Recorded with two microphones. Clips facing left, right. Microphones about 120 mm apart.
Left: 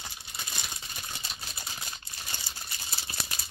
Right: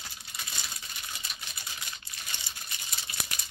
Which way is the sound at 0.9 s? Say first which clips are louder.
Left 2 dB; 30° left (ahead or behind).